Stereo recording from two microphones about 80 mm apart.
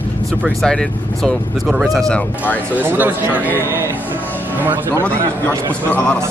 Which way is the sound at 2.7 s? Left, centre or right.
Right.